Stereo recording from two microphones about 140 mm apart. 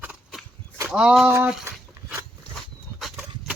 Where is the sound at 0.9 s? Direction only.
5° right (ahead or behind).